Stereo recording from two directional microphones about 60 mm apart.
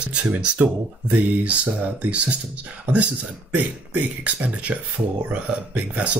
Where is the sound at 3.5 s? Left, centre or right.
Right.